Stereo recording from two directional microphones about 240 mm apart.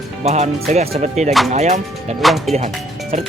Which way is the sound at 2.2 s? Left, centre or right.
Centre.